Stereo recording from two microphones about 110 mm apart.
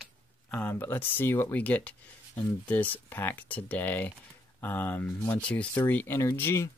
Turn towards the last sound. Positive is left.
turn(degrees=25)  # may be behind; listen again after turning